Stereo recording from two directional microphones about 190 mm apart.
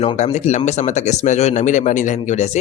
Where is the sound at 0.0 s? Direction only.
35° left (ahead or behind).